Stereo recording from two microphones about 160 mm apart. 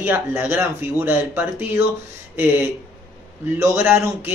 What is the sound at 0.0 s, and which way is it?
Speech, 15° right (ahead or behind).